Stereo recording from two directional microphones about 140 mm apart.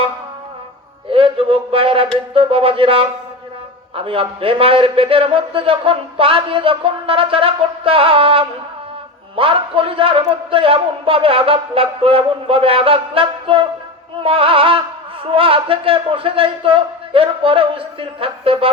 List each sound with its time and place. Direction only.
1.1 s a man's voice: 40° right (ahead or behind)